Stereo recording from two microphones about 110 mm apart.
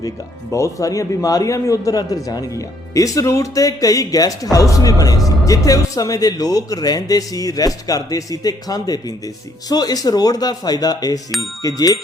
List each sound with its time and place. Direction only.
0.5 s speech: 30° left (ahead or behind)